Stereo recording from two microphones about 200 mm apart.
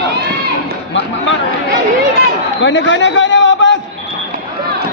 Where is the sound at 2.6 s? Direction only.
65° left (ahead or behind).